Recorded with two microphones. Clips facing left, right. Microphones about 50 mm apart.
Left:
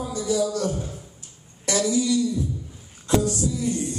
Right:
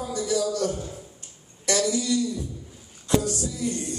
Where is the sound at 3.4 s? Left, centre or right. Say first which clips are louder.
Left 4 dB; left.